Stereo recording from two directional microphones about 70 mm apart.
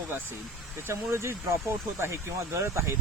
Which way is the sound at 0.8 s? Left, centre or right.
Right.